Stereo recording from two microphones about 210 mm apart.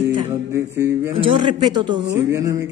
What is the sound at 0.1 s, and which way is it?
A man's voice, 15° right (ahead or behind).